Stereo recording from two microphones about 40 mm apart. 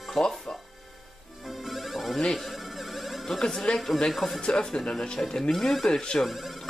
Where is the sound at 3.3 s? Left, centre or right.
Centre.